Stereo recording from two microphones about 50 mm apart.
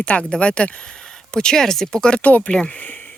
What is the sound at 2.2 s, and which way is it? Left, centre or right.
Speech, left.